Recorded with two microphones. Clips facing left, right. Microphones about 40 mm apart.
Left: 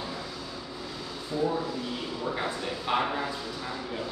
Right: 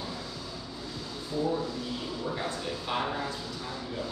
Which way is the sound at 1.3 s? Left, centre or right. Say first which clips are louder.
Left 1 dB; centre.